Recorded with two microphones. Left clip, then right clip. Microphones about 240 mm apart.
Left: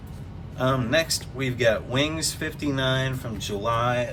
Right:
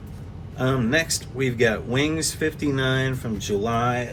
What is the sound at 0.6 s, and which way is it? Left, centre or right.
Speech, left.